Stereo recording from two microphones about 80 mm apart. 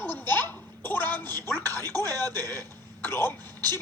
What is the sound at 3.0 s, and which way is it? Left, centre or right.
Speech, left.